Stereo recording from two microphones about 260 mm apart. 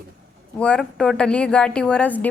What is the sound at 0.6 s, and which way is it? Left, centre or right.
Speech, centre.